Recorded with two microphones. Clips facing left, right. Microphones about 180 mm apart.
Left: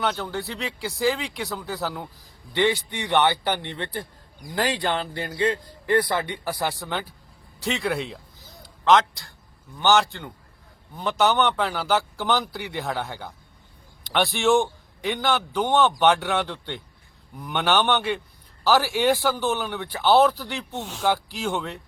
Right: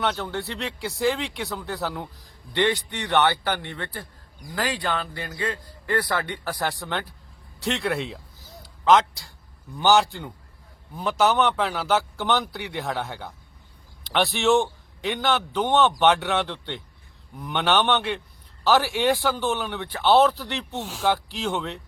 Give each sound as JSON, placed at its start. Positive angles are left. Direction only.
{"t": 0.0, "sound": "a man's voice", "side_deg": 0}
{"t": 8.6, "sound": "a sound", "side_deg": -5}
{"t": 9.7, "sound": "a man's voice", "side_deg": -10}